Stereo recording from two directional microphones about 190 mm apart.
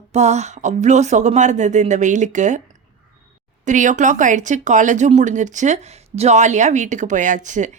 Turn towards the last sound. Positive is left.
turn(degrees=-40)  # may be behind; listen again after turning